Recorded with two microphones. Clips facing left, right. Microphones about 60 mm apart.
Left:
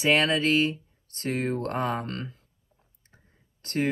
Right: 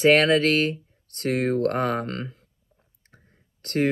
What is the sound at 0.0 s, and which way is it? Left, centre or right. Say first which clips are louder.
Speech: right 5 dB; right.